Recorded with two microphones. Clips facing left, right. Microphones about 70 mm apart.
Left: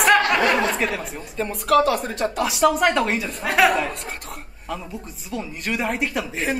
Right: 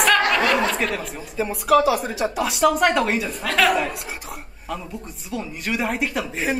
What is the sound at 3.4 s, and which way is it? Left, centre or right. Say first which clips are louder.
Speech: left 2 dB; centre.